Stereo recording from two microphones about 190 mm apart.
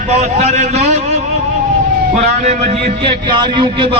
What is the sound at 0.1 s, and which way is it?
A man's voice, 35° right (ahead or behind).